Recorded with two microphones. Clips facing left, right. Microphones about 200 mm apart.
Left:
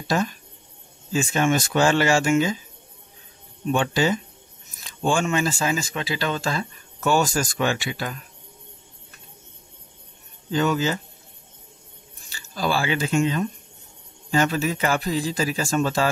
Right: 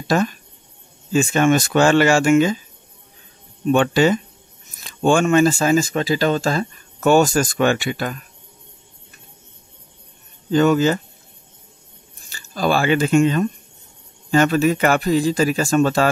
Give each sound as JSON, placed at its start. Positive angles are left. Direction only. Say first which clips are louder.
{"t": 0.1, "sound": "speech", "louder": "right 5 dB", "side_deg": -65}
{"t": 3.7, "sound": "speech", "louder": "right 6 dB", "side_deg": -65}
{"t": 10.5, "sound": "speech", "louder": "right 7 dB", "side_deg": -55}
{"t": 12.3, "sound": "speech", "louder": "right 5 dB", "side_deg": -50}